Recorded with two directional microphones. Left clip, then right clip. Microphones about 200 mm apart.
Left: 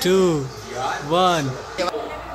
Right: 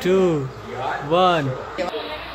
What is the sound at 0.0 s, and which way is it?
Speech, 5° left (ahead or behind).